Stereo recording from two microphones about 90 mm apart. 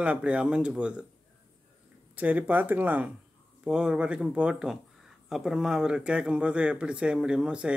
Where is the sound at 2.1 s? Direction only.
15° right (ahead or behind).